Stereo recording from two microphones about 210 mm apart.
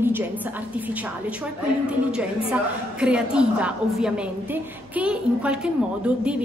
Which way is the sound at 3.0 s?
5° right (ahead or behind).